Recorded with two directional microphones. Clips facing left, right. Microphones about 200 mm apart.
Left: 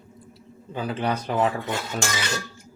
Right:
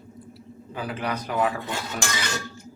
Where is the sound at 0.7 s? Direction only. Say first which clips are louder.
Left 3 dB; 25° left (ahead or behind).